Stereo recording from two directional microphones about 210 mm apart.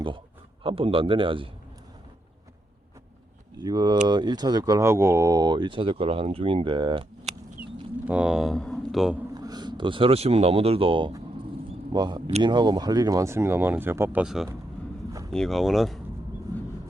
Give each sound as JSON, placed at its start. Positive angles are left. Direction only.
{"t": 0.6, "sound": "speech", "side_deg": -25}
{"t": 3.6, "sound": "speech", "side_deg": -20}
{"t": 8.0, "sound": "speech", "side_deg": -5}
{"t": 9.3, "sound": "speech", "side_deg": -20}
{"t": 16.5, "sound": "vehicle", "side_deg": -15}